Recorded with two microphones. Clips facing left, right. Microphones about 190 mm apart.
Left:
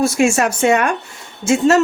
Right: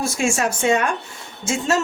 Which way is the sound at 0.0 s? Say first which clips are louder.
Left 6 dB; 65° left (ahead or behind).